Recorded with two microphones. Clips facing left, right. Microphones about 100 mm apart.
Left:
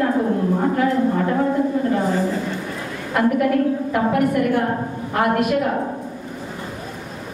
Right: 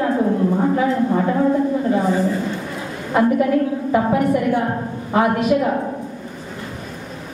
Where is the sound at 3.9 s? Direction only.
55° left (ahead or behind).